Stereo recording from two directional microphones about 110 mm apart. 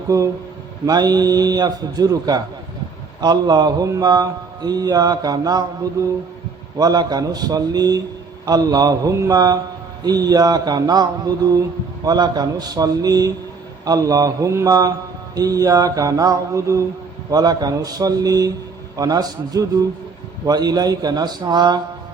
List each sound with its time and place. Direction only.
0.1 s a man's voice: 30° right (ahead or behind)
6.7 s a man's voice: 35° right (ahead or behind)